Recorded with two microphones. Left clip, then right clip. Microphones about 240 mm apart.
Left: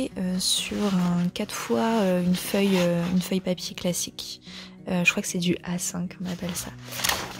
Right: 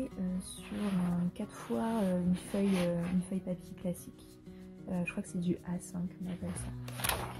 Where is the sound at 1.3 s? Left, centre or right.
Left.